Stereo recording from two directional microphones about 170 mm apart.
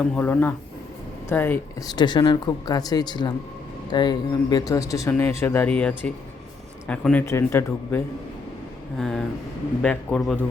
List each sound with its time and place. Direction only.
0.0 s speech: 10° left (ahead or behind)
1.9 s speech: 25° left (ahead or behind)
9.0 s a man's voice: centre (ahead or behind)